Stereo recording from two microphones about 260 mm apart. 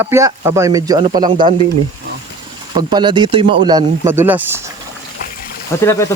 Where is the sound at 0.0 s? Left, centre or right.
Centre.